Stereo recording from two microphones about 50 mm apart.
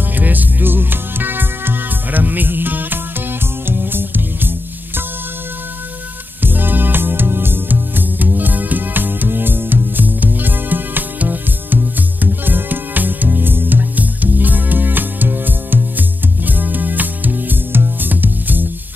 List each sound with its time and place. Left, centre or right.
0.1 s music: right
6.4 s music: right